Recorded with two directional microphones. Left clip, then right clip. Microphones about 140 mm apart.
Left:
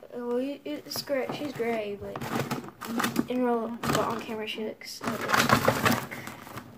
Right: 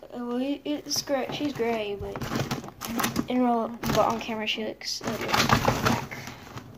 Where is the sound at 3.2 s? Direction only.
55° right (ahead or behind).